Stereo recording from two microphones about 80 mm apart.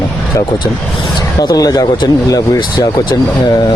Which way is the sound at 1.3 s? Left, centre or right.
Left.